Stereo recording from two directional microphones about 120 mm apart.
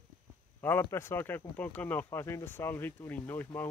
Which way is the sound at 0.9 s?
20° left (ahead or behind).